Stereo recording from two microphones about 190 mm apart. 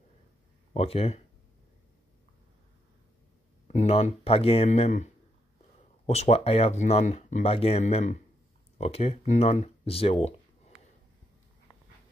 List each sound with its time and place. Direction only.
0.7 s speech: 30° left (ahead or behind)
3.6 s speech: 35° left (ahead or behind)